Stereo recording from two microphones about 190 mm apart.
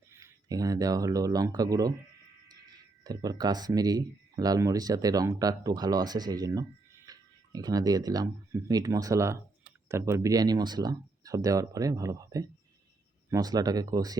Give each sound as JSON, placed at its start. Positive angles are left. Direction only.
{"t": 0.1, "sound": "speech", "side_deg": -15}
{"t": 3.0, "sound": "speech", "side_deg": -20}